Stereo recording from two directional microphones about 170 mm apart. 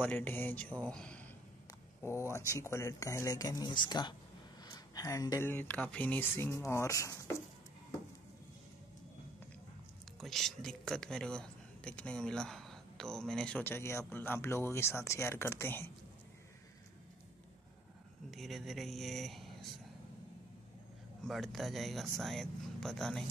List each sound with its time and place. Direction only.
0.0 s speech: 10° left (ahead or behind)
2.3 s speech: 15° left (ahead or behind)
10.2 s speech: centre (ahead or behind)
18.3 s speech: centre (ahead or behind)
21.2 s speech: centre (ahead or behind)